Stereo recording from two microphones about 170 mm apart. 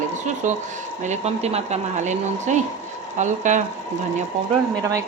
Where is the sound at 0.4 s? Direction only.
45° right (ahead or behind).